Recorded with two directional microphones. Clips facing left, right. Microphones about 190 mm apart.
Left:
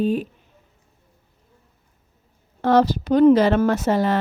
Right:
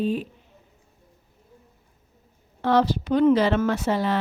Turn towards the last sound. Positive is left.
turn(degrees=45)  # may be behind; listen again after turning